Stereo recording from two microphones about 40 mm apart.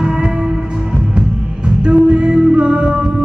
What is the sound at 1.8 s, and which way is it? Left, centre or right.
Music, right.